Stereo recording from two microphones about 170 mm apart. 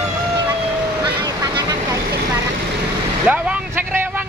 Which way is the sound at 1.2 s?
20° right (ahead or behind).